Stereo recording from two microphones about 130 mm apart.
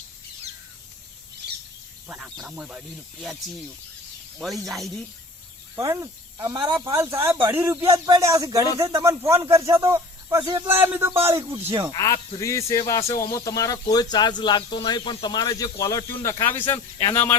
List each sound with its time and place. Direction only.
2.0 s speech: 10° right (ahead or behind)
4.6 s speech: centre (ahead or behind)
5.7 s speech: 25° right (ahead or behind)
6.9 s speech: 20° right (ahead or behind)
10.7 s speech: 15° right (ahead or behind)
11.9 s speech: 25° left (ahead or behind)